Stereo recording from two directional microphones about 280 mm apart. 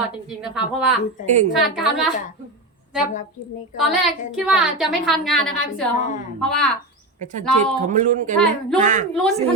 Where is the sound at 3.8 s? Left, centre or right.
Centre.